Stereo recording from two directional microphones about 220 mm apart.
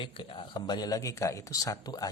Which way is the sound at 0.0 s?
25° left (ahead or behind).